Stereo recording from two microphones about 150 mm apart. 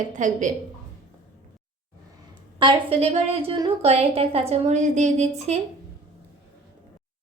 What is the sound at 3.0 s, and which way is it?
A woman's voice, 45° right (ahead or behind).